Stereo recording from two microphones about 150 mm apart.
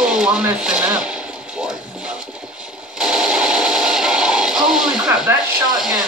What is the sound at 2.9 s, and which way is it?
Radio, 5° right (ahead or behind).